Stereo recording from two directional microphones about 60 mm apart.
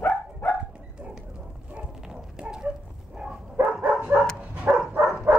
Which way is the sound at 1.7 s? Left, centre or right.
Centre.